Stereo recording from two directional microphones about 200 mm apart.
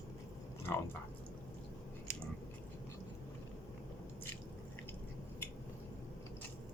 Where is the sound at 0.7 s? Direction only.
15° left (ahead or behind).